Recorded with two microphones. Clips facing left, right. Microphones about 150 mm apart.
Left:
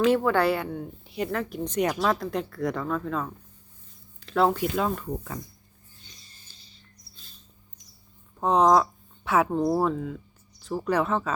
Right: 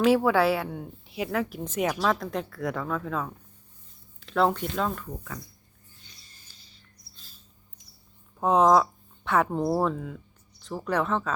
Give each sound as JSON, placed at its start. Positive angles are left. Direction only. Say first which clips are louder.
{"t": 0.0, "sound": "speech", "louder": "right 1 dB", "side_deg": -5}
{"t": 4.9, "sound": "speech", "louder": "left 5 dB", "side_deg": 25}
{"t": 6.0, "sound": "a sound", "louder": "left 2 dB", "side_deg": 30}
{"t": 8.4, "sound": "speech", "louder": "even", "side_deg": -5}